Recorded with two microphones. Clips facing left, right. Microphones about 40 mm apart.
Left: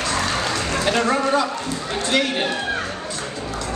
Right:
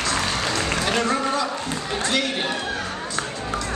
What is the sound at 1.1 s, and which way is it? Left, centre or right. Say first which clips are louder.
Speech: left 4 dB; centre.